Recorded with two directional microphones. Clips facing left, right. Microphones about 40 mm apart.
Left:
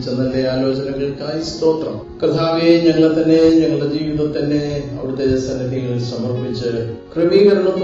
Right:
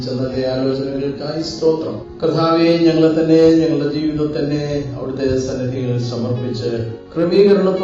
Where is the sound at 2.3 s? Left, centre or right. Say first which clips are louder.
Even; centre.